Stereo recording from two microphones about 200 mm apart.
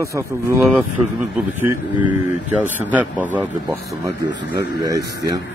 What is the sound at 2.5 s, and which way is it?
A man's voice, 10° right (ahead or behind).